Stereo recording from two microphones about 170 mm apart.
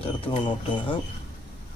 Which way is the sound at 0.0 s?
35° left (ahead or behind).